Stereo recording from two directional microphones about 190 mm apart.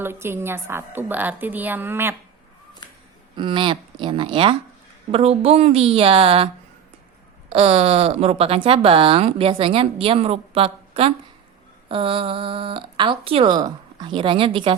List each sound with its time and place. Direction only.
0.0 s a woman's voice: 10° right (ahead or behind)
3.3 s a woman's voice: 25° right (ahead or behind)
7.5 s speech: 30° right (ahead or behind)